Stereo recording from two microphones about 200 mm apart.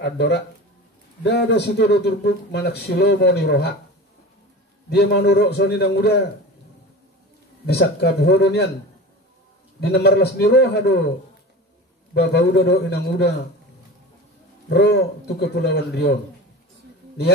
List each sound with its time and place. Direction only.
0.0 s speech: 60° left (ahead or behind)
4.8 s speech: 55° left (ahead or behind)
7.6 s speech: 50° left (ahead or behind)
9.8 s speech: 55° left (ahead or behind)
12.1 s speech: 55° left (ahead or behind)
14.7 s speech: 55° left (ahead or behind)